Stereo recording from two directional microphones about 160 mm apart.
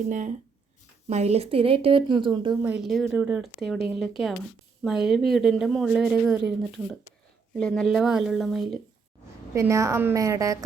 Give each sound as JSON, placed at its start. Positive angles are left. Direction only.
{"t": 0.1, "sound": "speech", "side_deg": -50}
{"t": 2.6, "sound": "a woman's voice", "side_deg": -5}
{"t": 7.5, "sound": "a woman's voice", "side_deg": 0}
{"t": 9.6, "sound": "a woman's voice", "side_deg": -20}